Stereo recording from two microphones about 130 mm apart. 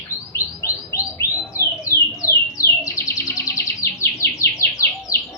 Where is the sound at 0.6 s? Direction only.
25° left (ahead or behind).